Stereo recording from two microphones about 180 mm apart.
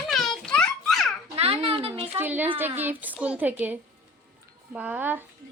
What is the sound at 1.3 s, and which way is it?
Speech, 35° right (ahead or behind).